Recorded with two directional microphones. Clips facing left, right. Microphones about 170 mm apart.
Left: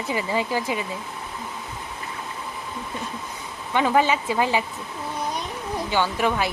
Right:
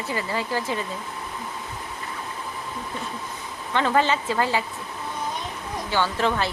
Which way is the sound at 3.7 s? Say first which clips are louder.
Left 1 dB; 10° left (ahead or behind).